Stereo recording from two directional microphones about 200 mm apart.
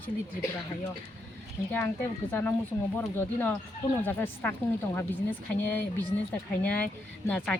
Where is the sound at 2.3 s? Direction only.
10° left (ahead or behind).